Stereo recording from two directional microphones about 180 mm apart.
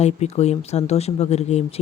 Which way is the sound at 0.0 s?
35° left (ahead or behind).